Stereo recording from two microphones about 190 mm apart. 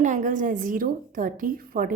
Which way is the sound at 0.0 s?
40° right (ahead or behind).